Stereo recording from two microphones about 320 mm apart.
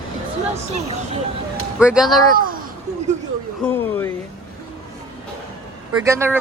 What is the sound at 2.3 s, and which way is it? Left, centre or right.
Speech, right.